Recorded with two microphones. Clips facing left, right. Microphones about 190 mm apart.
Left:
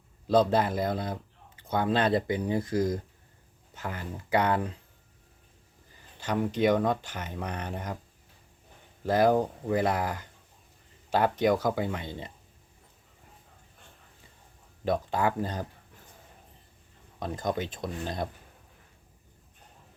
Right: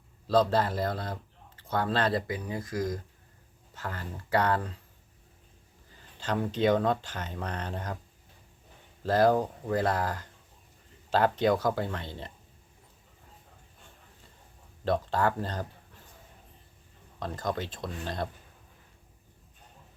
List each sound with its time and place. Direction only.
0.3 s speech: 20° left (ahead or behind)
3.8 s speech: 15° left (ahead or behind)
6.4 s speech: 15° left (ahead or behind)
9.0 s speech: 15° left (ahead or behind)
14.8 s speech: 15° left (ahead or behind)
17.2 s speech: 20° left (ahead or behind)